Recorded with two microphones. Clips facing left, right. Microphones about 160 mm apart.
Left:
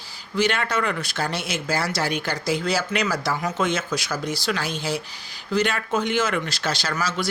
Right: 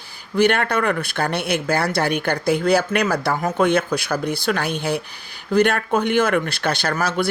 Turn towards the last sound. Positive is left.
turn(degrees=-60)  # may be behind; listen again after turning